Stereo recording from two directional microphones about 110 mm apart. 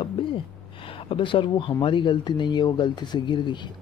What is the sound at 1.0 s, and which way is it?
Speech, 50° left (ahead or behind).